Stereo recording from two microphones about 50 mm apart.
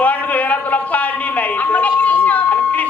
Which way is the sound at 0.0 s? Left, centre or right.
Left.